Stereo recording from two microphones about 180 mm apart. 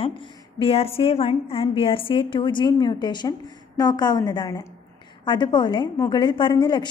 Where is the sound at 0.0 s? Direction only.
30° left (ahead or behind).